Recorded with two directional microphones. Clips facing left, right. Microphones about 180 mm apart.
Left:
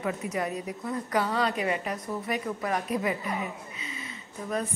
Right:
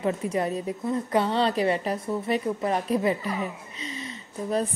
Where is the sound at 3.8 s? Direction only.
30° right (ahead or behind).